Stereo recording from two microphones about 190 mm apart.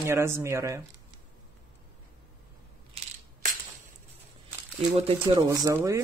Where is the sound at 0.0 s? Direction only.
15° right (ahead or behind).